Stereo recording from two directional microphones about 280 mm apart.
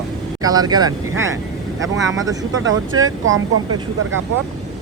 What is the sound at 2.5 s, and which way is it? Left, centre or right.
Speech, right.